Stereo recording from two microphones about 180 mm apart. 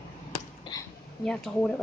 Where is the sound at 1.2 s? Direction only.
5° left (ahead or behind).